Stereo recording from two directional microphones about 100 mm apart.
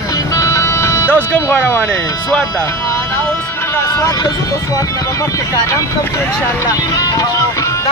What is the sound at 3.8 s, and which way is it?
Vehicle, 35° left (ahead or behind).